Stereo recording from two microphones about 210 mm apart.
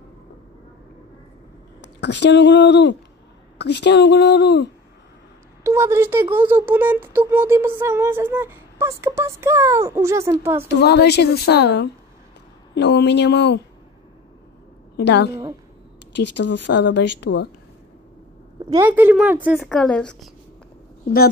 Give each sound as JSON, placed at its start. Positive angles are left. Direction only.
{"t": 1.8, "sound": "speech", "side_deg": 55}
{"t": 5.6, "sound": "a sound", "side_deg": -10}
{"t": 10.7, "sound": "a woman's voice", "side_deg": 55}
{"t": 15.0, "sound": "speech", "side_deg": 55}
{"t": 18.7, "sound": "speech", "side_deg": -10}